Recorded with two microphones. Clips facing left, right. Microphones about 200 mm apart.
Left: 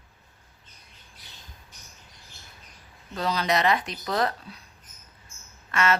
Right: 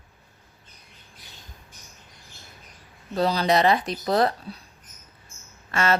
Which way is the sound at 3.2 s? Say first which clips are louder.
Right 4 dB; 35° right (ahead or behind).